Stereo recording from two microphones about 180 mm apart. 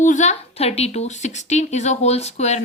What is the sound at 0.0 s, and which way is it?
A woman's voice, 45° left (ahead or behind).